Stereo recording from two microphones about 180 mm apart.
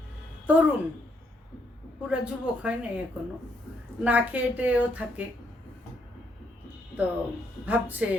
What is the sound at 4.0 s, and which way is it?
A woman's voice, 10° right (ahead or behind).